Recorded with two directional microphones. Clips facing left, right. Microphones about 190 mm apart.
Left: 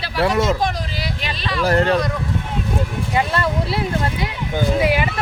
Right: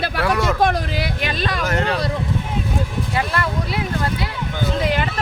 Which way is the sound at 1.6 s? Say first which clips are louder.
Left 7 dB; 35° left (ahead or behind).